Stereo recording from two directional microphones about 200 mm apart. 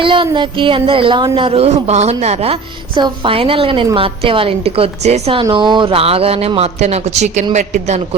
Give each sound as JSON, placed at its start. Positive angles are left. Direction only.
{"t": 0.0, "sound": "a man's voice", "side_deg": -25}